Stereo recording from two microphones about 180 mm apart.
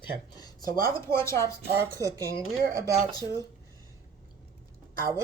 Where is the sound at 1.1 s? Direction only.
15° left (ahead or behind).